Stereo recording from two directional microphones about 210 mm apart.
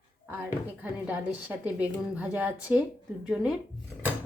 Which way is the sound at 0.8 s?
5° right (ahead or behind).